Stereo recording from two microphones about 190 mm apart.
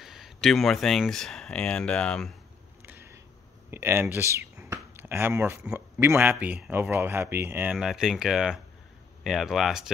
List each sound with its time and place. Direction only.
0.0 s speech: centre (ahead or behind)
2.8 s a sound: 10° right (ahead or behind)
3.7 s speech: 10° right (ahead or behind)